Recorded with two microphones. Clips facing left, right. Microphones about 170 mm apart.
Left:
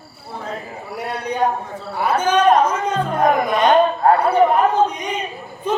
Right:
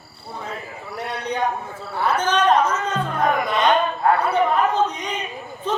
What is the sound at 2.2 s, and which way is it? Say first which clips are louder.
Speech: left 4 dB; 10° left (ahead or behind).